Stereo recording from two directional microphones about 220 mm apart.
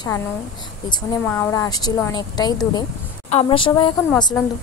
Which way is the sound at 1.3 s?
10° left (ahead or behind).